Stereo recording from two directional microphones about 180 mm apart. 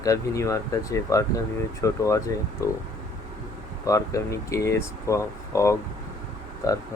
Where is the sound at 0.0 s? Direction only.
20° left (ahead or behind).